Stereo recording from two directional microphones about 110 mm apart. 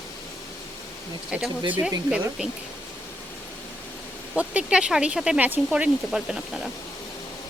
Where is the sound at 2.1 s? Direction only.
10° right (ahead or behind).